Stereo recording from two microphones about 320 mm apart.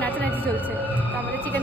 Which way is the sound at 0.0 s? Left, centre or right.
Centre.